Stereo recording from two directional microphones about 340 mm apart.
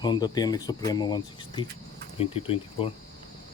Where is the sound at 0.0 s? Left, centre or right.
Centre.